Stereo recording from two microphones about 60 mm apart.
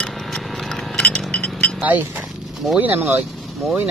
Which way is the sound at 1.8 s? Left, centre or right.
Right.